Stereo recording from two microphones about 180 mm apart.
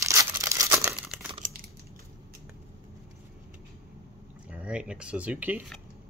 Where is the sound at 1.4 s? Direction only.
45° right (ahead or behind).